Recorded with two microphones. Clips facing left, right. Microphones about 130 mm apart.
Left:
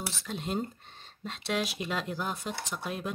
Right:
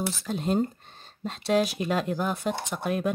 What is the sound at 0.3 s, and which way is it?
Speech, 40° right (ahead or behind).